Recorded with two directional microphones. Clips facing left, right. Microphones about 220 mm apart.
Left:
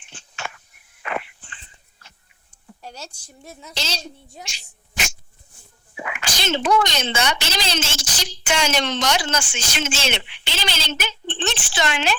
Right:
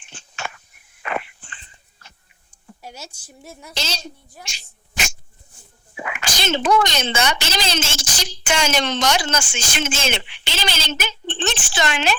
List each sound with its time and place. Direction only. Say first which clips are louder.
0.1 s a sound: right 2 dB; 45° right (ahead or behind)
2.8 s a woman's voice: even; 10° right (ahead or behind)
3.8 s speech: right 1 dB; 50° right (ahead or behind)
6.0 s a woman's voice: right 2 dB; 50° right (ahead or behind)